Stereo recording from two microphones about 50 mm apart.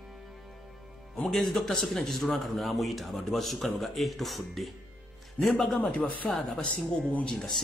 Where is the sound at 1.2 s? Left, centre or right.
Centre.